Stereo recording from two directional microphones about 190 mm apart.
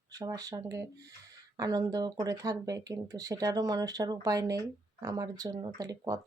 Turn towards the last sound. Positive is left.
turn(degrees=-20)  # may be behind; listen again after turning